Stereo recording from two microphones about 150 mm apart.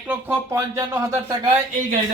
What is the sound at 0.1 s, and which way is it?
Speech, 10° right (ahead or behind).